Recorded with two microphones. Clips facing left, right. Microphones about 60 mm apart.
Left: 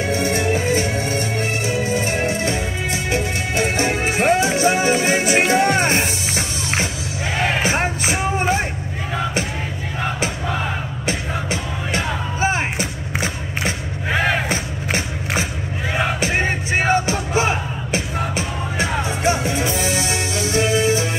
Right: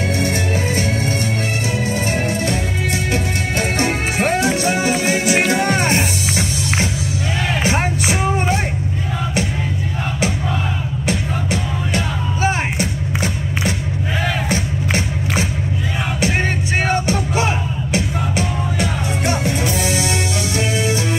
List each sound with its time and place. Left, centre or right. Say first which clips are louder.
0.1 s music: left 1 dB; left
11.9 s music: left 1 dB; left
14.5 s music: right 2 dB; left
16.8 s music: left 1 dB; centre
18.8 s music: left 3 dB; left